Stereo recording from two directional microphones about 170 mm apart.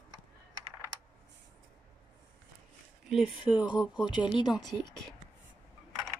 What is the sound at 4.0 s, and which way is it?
Speech, 25° left (ahead or behind).